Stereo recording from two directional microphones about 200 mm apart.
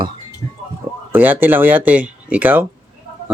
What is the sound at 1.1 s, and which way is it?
Speech, 10° right (ahead or behind).